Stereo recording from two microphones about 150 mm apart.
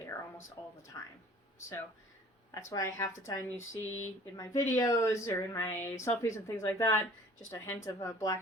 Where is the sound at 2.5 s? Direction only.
20° left (ahead or behind).